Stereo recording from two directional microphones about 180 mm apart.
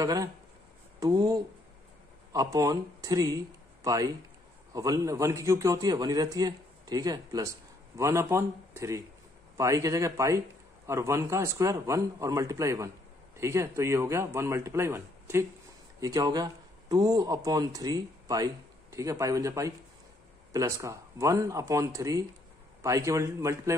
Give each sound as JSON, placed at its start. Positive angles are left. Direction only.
{"t": 0.0, "sound": "a man's voice", "side_deg": -20}